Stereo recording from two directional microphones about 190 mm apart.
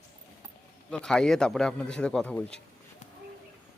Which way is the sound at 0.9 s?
5° left (ahead or behind).